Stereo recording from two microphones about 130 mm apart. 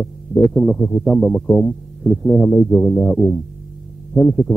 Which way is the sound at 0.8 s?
35° left (ahead or behind).